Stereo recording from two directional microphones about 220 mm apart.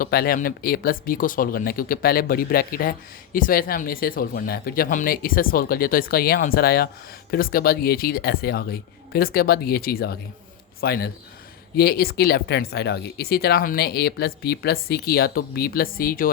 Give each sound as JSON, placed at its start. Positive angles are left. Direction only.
{"t": 0.0, "sound": "speech", "side_deg": 45}